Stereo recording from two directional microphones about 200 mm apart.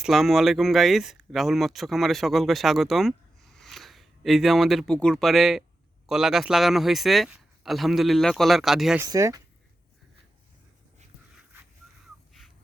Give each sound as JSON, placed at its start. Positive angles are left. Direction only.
{"t": 0.0, "sound": "a man's voice", "side_deg": 0}
{"t": 9.0, "sound": "speech", "side_deg": -15}